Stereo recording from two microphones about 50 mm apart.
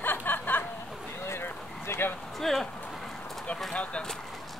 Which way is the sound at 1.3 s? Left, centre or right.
Left.